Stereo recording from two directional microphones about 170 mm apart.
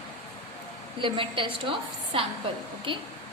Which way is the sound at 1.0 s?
30° right (ahead or behind).